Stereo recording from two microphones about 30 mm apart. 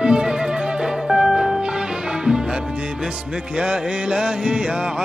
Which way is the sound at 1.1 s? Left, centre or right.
Centre.